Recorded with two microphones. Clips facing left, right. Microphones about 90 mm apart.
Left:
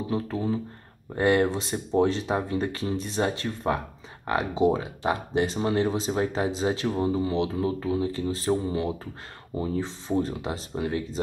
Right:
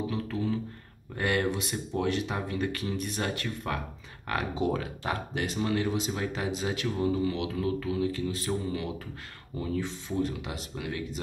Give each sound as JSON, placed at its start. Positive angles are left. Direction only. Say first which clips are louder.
{"t": 0.1, "sound": "speech", "louder": "left 4 dB", "side_deg": 30}